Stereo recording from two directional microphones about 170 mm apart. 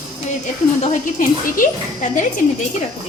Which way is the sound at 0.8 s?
50° left (ahead or behind).